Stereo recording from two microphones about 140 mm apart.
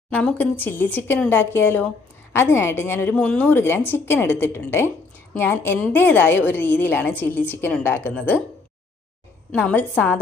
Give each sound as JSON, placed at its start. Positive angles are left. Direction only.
{"t": 0.1, "sound": "a woman's voice", "side_deg": 10}
{"t": 9.5, "sound": "a woman's voice", "side_deg": 10}